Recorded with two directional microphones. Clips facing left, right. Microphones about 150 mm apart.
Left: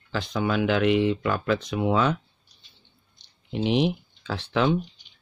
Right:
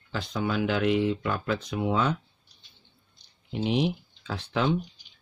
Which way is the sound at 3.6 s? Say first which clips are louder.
Left 3 dB; 75° left (ahead or behind).